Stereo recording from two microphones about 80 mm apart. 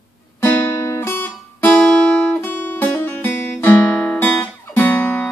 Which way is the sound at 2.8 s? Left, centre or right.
Left.